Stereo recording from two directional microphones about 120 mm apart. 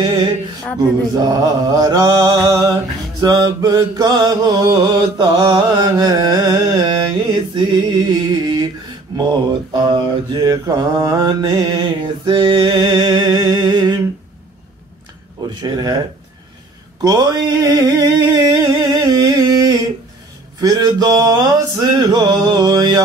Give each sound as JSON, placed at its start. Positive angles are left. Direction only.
{"t": 0.0, "sound": "music", "side_deg": -35}
{"t": 0.7, "sound": "mantra", "side_deg": -30}
{"t": 15.6, "sound": "mantra", "side_deg": -35}
{"t": 17.0, "sound": "a sound", "side_deg": -35}
{"t": 20.6, "sound": "mantra", "side_deg": -35}